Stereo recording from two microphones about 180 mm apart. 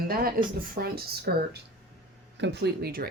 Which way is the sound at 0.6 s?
55° right (ahead or behind).